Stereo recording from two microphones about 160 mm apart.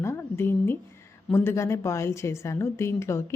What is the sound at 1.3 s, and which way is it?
Speech, 15° left (ahead or behind).